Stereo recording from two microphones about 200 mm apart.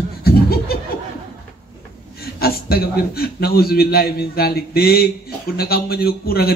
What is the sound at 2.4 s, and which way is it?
Speech, 50° left (ahead or behind).